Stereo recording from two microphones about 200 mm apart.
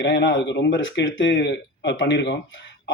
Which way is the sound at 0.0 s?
60° left (ahead or behind).